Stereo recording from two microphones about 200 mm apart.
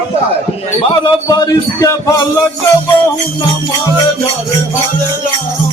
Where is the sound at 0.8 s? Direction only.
20° left (ahead or behind).